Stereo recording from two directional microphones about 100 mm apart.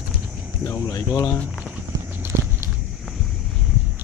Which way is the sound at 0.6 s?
30° left (ahead or behind).